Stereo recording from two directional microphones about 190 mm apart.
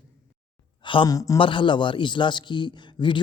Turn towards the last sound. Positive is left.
turn(degrees=25)  # may be behind; listen again after turning